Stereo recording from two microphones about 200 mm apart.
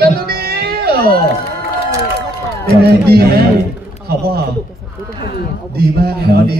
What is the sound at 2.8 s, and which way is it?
Speech, 50° right (ahead or behind).